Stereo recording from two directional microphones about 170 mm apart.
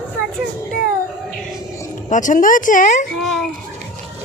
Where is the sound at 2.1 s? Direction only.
50° left (ahead or behind).